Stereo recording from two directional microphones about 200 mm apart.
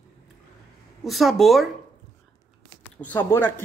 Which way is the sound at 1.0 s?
Centre (ahead or behind).